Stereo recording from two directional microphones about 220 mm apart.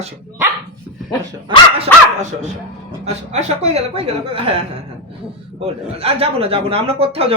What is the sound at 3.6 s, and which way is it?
Speech, 30° right (ahead or behind).